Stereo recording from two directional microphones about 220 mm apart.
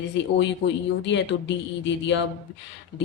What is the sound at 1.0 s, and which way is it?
Speech, 55° left (ahead or behind).